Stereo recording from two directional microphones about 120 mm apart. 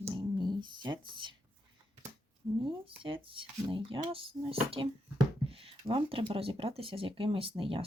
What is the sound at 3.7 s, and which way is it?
Speech, 45° right (ahead or behind).